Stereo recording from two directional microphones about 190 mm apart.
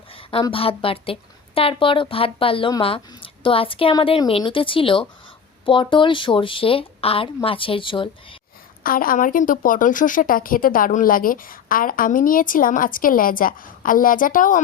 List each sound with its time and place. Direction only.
0.1 s a woman's voice: 30° left (ahead or behind)
8.8 s speech: 50° left (ahead or behind)